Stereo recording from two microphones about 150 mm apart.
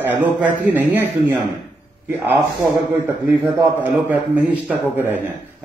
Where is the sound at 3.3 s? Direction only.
25° right (ahead or behind).